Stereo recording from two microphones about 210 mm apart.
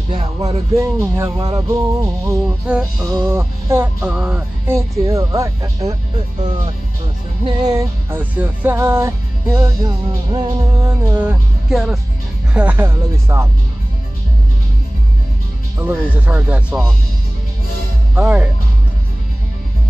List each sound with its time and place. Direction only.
0.1 s music: 30° right (ahead or behind)
0.7 s music: 15° right (ahead or behind)
2.6 s music: 5° right (ahead or behind)
7.4 s music: 20° right (ahead or behind)
15.8 s music: 10° right (ahead or behind)
18.1 s music: 5° right (ahead or behind)